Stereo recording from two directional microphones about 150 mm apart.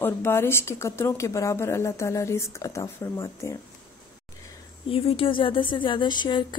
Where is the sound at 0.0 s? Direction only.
15° left (ahead or behind).